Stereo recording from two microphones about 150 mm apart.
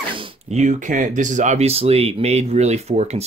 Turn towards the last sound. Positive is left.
turn(degrees=-45)  # may be behind; listen again after turning